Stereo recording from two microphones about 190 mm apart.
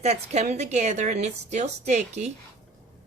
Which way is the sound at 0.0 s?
35° right (ahead or behind).